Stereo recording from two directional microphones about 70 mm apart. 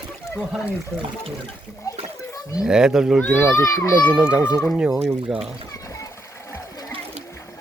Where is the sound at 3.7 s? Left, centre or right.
Left.